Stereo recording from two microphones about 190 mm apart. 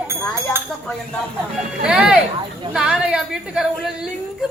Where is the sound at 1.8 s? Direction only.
5° right (ahead or behind).